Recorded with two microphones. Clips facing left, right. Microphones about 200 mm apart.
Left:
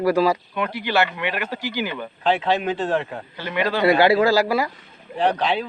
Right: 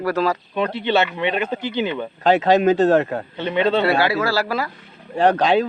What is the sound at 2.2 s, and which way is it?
Speech, 40° right (ahead or behind).